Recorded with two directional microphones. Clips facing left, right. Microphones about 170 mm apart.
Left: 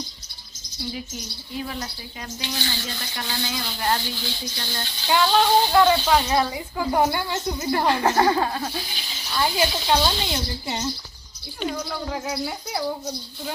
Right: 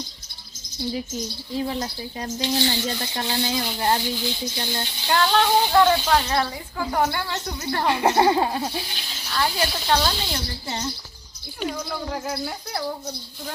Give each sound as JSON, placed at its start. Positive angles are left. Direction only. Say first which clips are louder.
{"t": 1.5, "sound": "speech", "louder": "right 5 dB", "side_deg": -30}
{"t": 5.0, "sound": "speech", "louder": "left 1 dB", "side_deg": 5}
{"t": 6.2, "sound": "speech", "louder": "left 2 dB", "side_deg": 15}
{"t": 7.9, "sound": "speech", "louder": "right 2 dB", "side_deg": -20}
{"t": 8.9, "sound": "a sound", "louder": "even", "side_deg": 0}
{"t": 9.3, "sound": "speech", "louder": "left 2 dB", "side_deg": 10}